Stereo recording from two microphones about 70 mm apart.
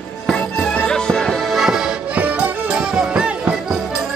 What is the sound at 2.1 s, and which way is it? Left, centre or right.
Music, centre.